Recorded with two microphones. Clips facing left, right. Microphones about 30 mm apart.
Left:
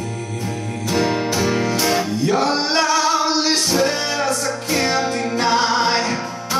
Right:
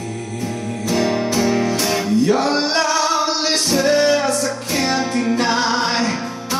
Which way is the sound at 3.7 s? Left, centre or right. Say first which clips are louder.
Right 4 dB; centre.